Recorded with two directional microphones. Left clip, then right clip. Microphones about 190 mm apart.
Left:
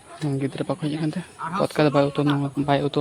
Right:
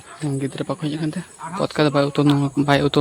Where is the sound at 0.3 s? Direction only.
5° right (ahead or behind).